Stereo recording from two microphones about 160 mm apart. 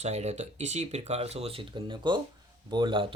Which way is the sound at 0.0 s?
45° right (ahead or behind).